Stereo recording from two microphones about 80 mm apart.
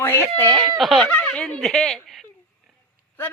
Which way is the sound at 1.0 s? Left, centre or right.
Centre.